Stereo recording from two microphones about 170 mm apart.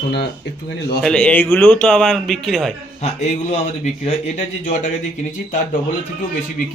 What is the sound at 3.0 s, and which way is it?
Speech, 40° left (ahead or behind).